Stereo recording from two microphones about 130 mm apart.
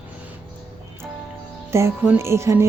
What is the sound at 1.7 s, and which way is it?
Music, 20° right (ahead or behind).